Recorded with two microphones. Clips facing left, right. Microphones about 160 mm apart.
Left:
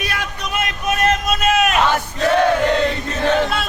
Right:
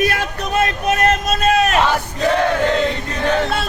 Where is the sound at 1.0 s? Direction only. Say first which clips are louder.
Even; 35° right (ahead or behind).